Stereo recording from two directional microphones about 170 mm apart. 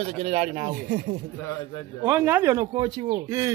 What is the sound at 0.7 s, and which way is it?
Speech, 55° right (ahead or behind).